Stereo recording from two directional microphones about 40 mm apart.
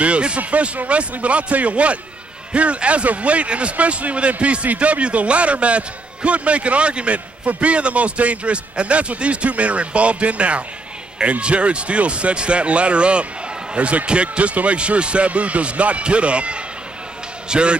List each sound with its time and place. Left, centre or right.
0.0 s speech: right